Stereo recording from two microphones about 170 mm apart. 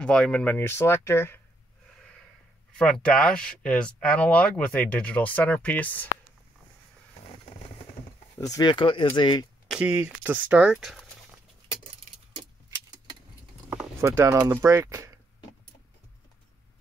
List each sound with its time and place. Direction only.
0.0 s speech: 5° left (ahead or behind)
2.8 s speech: 5° left (ahead or behind)
8.4 s speech: 20° left (ahead or behind)
9.7 s speech: 5° right (ahead or behind)
12.4 s keys jangling: 25° right (ahead or behind)
14.0 s speech: 15° right (ahead or behind)